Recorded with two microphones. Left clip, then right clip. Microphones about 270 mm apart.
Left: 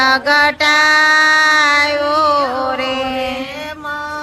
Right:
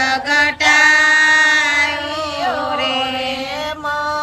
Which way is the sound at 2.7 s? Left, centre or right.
Centre.